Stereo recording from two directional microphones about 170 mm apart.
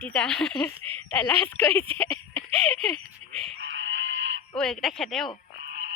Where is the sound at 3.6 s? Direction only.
90° right.